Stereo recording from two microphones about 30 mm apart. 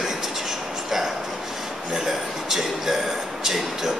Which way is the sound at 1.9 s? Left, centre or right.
Centre.